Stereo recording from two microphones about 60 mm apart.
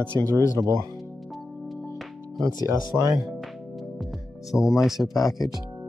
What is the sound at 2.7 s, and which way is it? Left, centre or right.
Speech, right.